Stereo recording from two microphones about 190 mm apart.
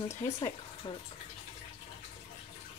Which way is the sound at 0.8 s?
25° left (ahead or behind).